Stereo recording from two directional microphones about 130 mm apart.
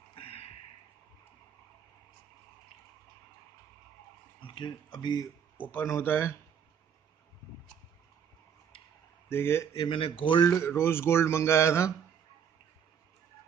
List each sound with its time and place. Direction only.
0.1 s a sound: 45° left (ahead or behind)
4.4 s speech: 40° left (ahead or behind)
5.6 s speech: 15° left (ahead or behind)
9.3 s speech: 20° left (ahead or behind)
9.8 s speech: 45° left (ahead or behind)
10.8 s speech: 20° left (ahead or behind)